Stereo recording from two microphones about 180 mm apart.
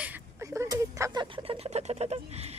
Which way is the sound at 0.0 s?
10° right (ahead or behind).